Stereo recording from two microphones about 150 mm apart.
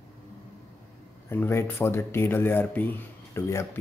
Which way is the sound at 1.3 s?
15° left (ahead or behind).